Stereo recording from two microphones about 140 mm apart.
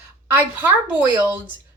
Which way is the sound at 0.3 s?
15° right (ahead or behind).